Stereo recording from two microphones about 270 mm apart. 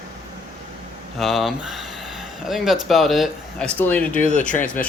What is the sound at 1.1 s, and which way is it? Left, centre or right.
Speech, centre.